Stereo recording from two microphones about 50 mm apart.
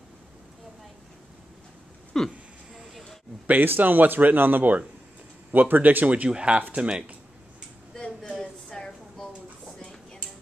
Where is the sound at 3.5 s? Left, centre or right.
Right.